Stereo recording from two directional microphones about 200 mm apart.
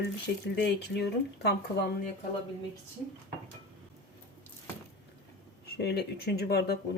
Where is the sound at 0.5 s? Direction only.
55° left (ahead or behind).